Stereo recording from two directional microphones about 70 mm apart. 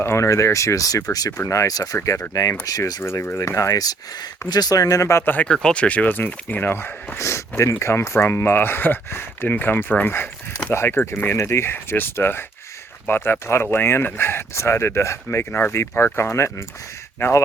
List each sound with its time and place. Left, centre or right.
0.0 s speech: left
3.0 s speech: left
3.8 s speech: left
5.2 s speech: left
5.5 s speech: centre; by 7.2 s left
7.2 s speech: left